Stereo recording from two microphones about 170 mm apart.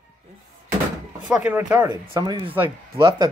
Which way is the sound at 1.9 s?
25° right (ahead or behind).